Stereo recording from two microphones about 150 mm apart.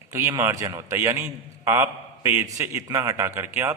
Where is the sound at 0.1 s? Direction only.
20° right (ahead or behind).